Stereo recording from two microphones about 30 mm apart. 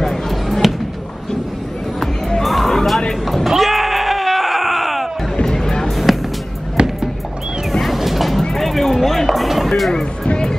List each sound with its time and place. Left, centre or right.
0.5 s a sound: centre
2.0 s music: centre
3.4 s music: centre
5.4 s music: left
5.9 s music: centre
6.8 s music: right
7.8 s vehicle: centre
8.4 s music: centre
9.8 s music: centre
10.2 s music: left